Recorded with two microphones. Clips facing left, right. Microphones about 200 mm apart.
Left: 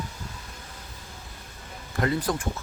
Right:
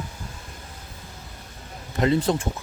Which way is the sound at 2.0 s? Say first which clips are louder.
Right 5 dB; 25° right (ahead or behind).